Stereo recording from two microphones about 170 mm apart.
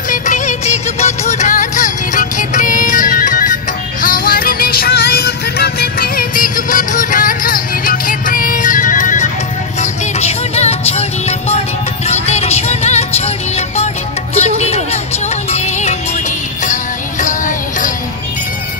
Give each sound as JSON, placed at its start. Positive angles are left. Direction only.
{"t": 0.1, "sound": "music", "side_deg": 45}